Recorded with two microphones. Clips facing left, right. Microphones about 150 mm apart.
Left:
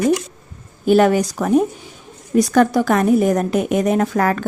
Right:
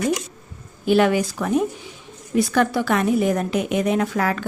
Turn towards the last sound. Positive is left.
turn(degrees=45)  # may be behind; listen again after turning